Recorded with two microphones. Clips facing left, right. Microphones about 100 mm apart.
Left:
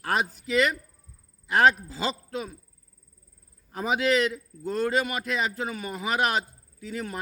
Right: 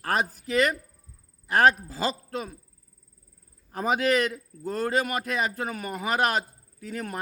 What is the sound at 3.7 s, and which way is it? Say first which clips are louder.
A man's voice: even; 45° right (ahead or behind).